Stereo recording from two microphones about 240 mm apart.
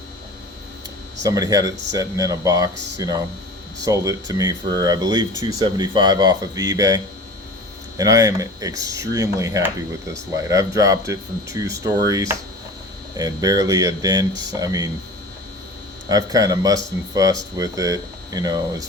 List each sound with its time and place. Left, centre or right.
1.2 s speech: centre
16.0 s speech: centre